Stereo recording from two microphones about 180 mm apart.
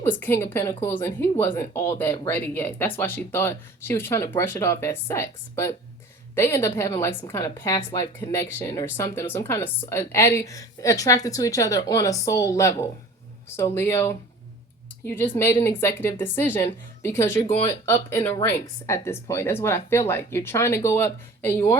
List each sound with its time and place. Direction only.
0.0 s a woman's voice: 10° left (ahead or behind)